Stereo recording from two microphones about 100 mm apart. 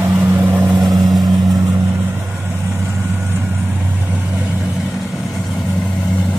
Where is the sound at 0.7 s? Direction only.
40° right (ahead or behind).